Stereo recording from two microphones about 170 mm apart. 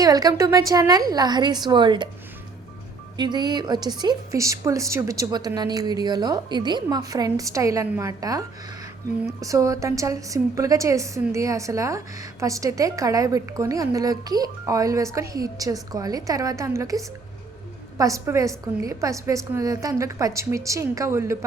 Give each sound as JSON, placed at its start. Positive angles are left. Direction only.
{"t": 0.0, "sound": "a woman's voice", "side_deg": -20}
{"t": 3.2, "sound": "a woman's voice", "side_deg": -25}